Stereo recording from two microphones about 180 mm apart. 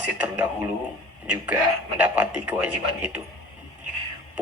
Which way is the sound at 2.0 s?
10° right (ahead or behind).